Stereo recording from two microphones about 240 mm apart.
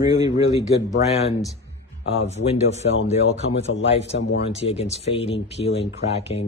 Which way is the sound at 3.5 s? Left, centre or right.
Left.